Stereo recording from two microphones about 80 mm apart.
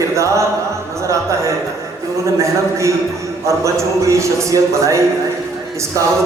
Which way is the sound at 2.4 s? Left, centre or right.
Right.